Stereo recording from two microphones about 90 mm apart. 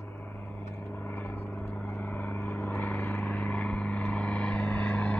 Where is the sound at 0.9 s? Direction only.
20° left (ahead or behind).